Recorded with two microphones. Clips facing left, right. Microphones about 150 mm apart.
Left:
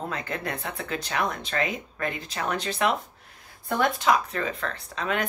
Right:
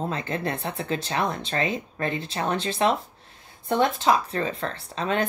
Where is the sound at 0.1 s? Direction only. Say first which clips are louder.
Right 3 dB; 30° right (ahead or behind).